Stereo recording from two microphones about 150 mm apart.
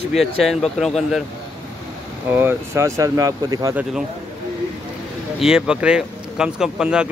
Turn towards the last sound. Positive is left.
turn(degrees=-5)  # may be behind; listen again after turning